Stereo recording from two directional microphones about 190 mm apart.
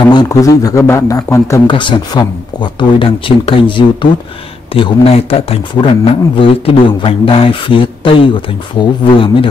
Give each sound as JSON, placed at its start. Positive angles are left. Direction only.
{"t": 0.1, "sound": "a man's voice", "side_deg": 20}